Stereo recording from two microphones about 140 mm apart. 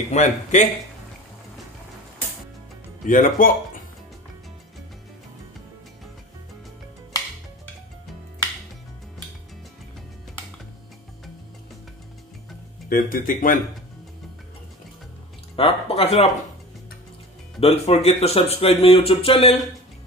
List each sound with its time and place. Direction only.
0.1 s speech: 60° left (ahead or behind)
3.1 s speech: 70° left (ahead or behind)
12.9 s speech: 80° left
15.5 s speech: 45° left (ahead or behind)
17.6 s speech: 45° left (ahead or behind)